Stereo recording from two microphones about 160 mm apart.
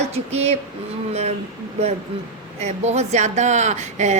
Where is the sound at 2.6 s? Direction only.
45° right (ahead or behind).